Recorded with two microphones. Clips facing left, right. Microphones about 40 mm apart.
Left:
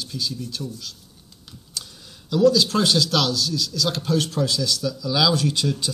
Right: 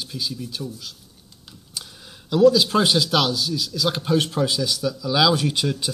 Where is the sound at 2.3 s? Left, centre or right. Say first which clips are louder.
Right 2 dB; centre.